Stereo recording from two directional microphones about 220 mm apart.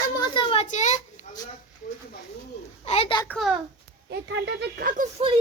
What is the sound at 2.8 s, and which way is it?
Speech, 30° left (ahead or behind).